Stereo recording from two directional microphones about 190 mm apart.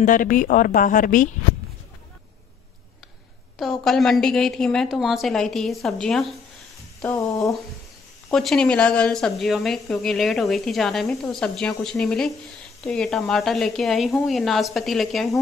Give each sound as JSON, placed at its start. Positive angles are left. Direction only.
{"t": 0.0, "sound": "a woman's voice", "side_deg": 45}
{"t": 3.8, "sound": "a woman's voice", "side_deg": 0}
{"t": 7.0, "sound": "a sound", "side_deg": 10}
{"t": 8.3, "sound": "a woman's voice", "side_deg": 0}